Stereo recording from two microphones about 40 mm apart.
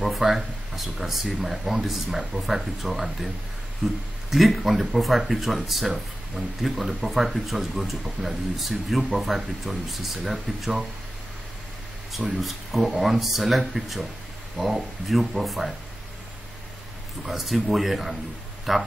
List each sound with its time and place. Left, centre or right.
0.0 s speech: centre
12.4 s speech: centre
15.0 s speech: centre
17.2 s speech: centre